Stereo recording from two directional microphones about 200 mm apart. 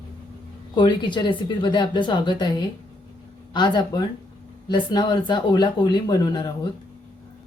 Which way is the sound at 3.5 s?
20° left (ahead or behind).